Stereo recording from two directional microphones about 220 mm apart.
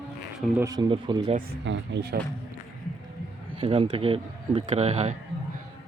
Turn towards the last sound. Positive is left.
turn(degrees=-30)  # may be behind; listen again after turning